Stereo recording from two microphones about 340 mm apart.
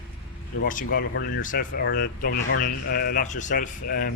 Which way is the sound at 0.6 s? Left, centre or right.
Left.